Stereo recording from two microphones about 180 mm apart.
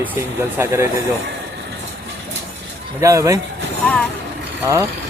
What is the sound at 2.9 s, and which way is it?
Speech, 15° right (ahead or behind).